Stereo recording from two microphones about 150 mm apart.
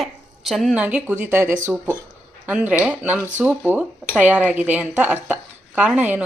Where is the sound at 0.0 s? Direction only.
Centre (ahead or behind).